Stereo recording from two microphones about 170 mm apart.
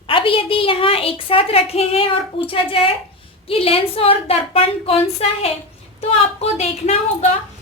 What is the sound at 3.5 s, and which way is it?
A woman's voice, 35° left (ahead or behind).